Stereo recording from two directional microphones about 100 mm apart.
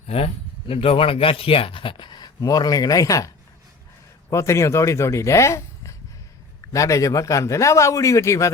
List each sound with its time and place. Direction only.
0.7 s a man's voice: 70° left (ahead or behind); by 8.5 s 30° left (ahead or behind)